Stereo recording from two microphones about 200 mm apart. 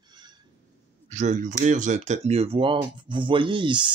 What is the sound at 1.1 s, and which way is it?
Speech, 40° right (ahead or behind).